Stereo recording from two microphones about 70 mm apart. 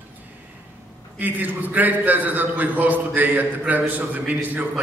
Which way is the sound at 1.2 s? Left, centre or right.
Right.